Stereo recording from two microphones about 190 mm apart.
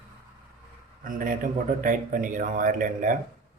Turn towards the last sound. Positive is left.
turn(degrees=-45)  # may be behind; listen again after turning